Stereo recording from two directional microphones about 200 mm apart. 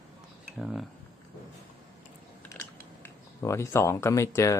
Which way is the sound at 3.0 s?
15° left (ahead or behind).